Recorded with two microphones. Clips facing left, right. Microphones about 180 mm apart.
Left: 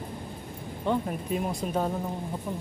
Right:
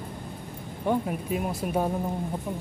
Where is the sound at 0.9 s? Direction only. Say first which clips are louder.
Right 1 dB; 5° right (ahead or behind).